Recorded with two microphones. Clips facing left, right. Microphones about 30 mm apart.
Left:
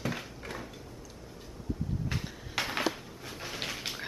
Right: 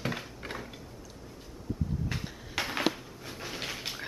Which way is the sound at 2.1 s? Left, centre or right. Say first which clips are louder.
Even; centre.